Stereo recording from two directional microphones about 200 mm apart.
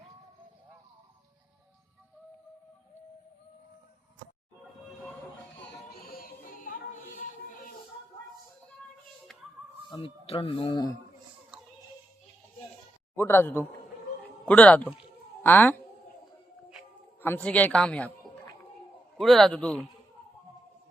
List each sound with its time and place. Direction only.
5.5 s music: 50° left (ahead or behind)
9.9 s speech: 30° left (ahead or behind)
13.1 s a man's voice: 10° left (ahead or behind)
17.2 s a man's voice: 10° left (ahead or behind)
19.1 s a man's voice: centre (ahead or behind)